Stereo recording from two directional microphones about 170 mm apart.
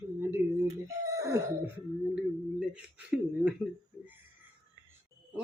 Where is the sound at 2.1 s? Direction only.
5° right (ahead or behind).